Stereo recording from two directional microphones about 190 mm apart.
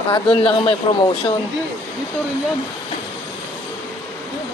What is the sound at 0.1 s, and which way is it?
Speech, 30° left (ahead or behind).